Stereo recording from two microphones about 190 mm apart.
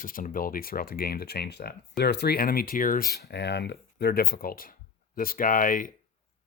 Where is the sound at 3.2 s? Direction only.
60° left (ahead or behind).